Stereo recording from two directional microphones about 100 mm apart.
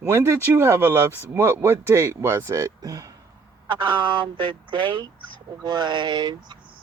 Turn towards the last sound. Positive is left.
turn(degrees=-45)  # may be behind; listen again after turning